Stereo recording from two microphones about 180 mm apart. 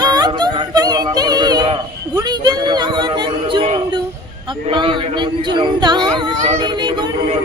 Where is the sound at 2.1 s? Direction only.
25° right (ahead or behind).